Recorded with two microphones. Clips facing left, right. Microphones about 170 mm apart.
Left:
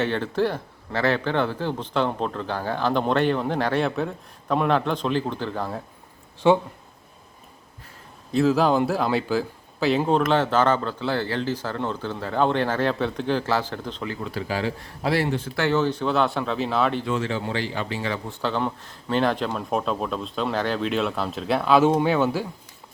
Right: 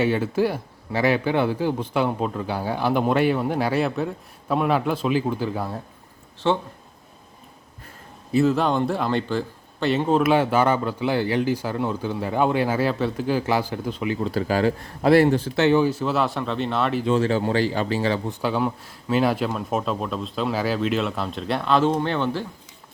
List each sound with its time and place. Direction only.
0.0 s a man's voice: 10° right (ahead or behind)
6.4 s speech: 15° left (ahead or behind)
8.3 s a man's voice: centre (ahead or behind)
14.3 s speech: 45° right (ahead or behind)
15.4 s speech: 30° right (ahead or behind)
15.6 s speech: 15° right (ahead or behind)
17.1 s speech: 40° right (ahead or behind)
18.3 s speech: 10° right (ahead or behind); by 22.4 s 10° left (ahead or behind)